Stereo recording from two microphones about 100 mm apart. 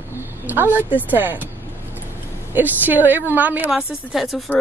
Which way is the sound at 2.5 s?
15° right (ahead or behind).